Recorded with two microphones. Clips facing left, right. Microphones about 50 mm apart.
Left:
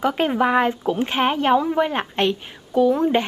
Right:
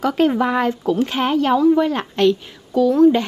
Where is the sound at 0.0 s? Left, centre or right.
Centre.